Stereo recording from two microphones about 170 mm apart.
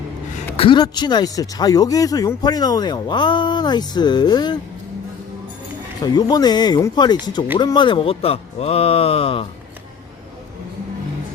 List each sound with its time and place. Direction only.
0.5 s speech: 30° left (ahead or behind)
6.0 s speech: 25° left (ahead or behind)